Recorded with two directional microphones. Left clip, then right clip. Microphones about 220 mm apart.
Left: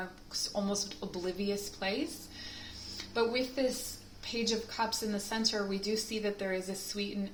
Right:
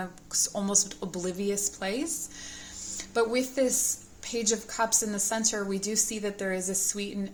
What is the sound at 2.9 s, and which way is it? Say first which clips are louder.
A woman's voice: right 5 dB; 50° right (ahead or behind).